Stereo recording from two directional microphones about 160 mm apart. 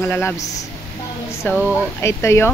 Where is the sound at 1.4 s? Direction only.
15° left (ahead or behind).